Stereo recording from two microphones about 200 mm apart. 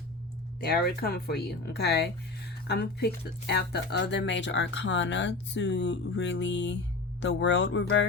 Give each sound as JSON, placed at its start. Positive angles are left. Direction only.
{"t": 0.6, "sound": "speech", "side_deg": 55}